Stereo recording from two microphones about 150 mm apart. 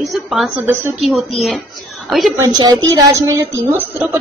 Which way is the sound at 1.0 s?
Centre (ahead or behind).